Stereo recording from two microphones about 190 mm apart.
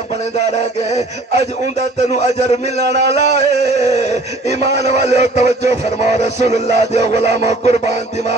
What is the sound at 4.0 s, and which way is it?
Speech, 35° left (ahead or behind).